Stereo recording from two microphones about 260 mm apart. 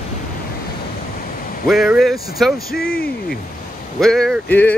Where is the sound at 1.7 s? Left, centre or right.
Centre.